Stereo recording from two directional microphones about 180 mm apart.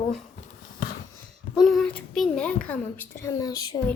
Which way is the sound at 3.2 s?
20° left (ahead or behind).